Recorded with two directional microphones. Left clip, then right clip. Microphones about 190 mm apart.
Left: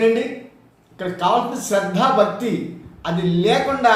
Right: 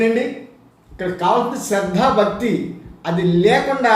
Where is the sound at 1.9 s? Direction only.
10° right (ahead or behind).